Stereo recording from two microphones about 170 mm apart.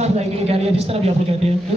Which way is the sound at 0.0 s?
35° right (ahead or behind).